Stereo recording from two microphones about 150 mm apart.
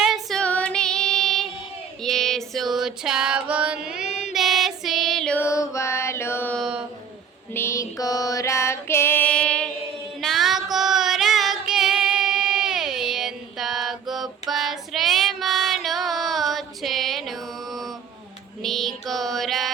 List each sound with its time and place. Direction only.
0.0 s female singing: centre (ahead or behind)
3.5 s music: 10° right (ahead or behind)
5.4 s music: 20° left (ahead or behind)
6.6 s a sound: 5° right (ahead or behind)
7.5 s female singing: 20° left (ahead or behind); by 17.9 s centre (ahead or behind)
18.6 s music: centre (ahead or behind)